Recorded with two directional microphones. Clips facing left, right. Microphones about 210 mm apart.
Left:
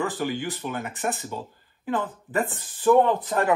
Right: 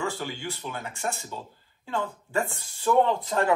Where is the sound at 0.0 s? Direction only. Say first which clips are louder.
Left 5 dB; 15° left (ahead or behind).